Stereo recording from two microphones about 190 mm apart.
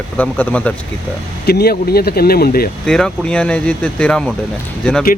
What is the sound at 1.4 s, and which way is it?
Speech, 55° left (ahead or behind).